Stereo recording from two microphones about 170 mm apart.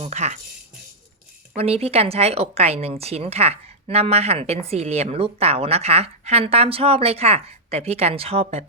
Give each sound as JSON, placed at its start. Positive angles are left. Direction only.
{"t": 0.0, "sound": "speech", "side_deg": -45}
{"t": 1.5, "sound": "speech", "side_deg": -35}